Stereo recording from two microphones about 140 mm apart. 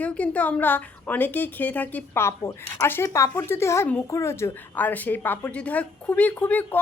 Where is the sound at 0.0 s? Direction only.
10° left (ahead or behind).